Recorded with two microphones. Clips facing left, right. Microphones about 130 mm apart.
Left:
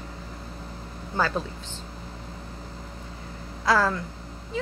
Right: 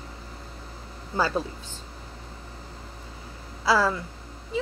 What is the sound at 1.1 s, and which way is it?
Speech, 10° right (ahead or behind).